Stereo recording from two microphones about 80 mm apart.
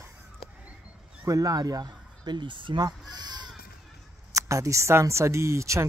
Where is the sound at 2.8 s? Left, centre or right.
Right.